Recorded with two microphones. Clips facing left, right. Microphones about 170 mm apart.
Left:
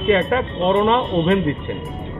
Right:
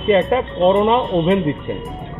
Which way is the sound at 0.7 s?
Centre (ahead or behind).